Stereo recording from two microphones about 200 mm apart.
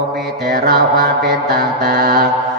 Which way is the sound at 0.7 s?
50° right (ahead or behind).